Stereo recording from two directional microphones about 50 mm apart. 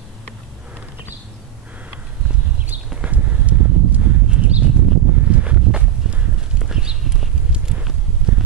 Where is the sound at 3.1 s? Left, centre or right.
Right.